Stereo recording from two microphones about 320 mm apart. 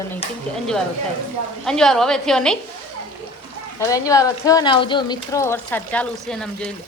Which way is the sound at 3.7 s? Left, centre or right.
Centre.